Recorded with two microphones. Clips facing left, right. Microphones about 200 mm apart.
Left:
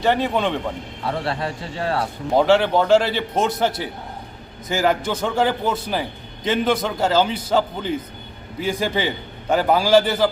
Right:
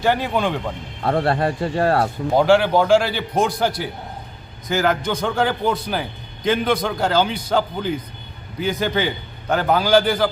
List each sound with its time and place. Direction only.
0.0 s a man's voice: centre (ahead or behind)
1.0 s speech: 55° right (ahead or behind)
2.3 s a man's voice: centre (ahead or behind)